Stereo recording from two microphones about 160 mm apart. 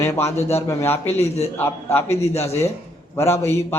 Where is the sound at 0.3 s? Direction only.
40° left (ahead or behind).